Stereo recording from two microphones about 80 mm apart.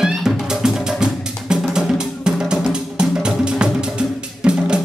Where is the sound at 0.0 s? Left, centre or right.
Centre.